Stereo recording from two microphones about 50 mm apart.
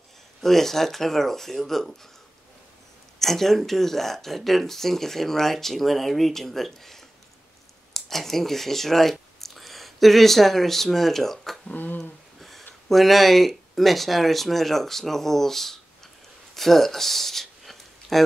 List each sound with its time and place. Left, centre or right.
0.4 s speech: centre
3.2 s speech: centre
11.6 s speech: left
12.0 s a sound: centre
12.8 s speech: centre
16.5 s a sound: centre